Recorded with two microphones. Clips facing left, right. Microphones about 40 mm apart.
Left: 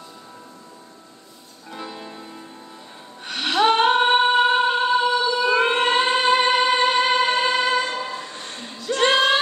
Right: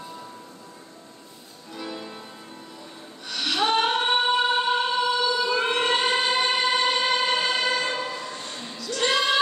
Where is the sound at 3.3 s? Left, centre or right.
Left.